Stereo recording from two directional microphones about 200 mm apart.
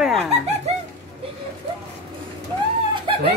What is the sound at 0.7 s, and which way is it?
Music, 30° right (ahead or behind).